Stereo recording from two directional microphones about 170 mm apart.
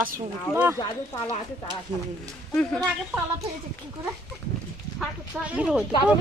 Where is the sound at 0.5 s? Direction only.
15° right (ahead or behind).